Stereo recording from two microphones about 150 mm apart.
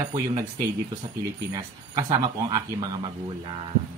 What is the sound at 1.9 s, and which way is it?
Speech, 25° right (ahead or behind).